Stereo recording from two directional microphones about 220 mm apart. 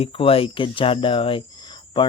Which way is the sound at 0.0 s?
25° left (ahead or behind).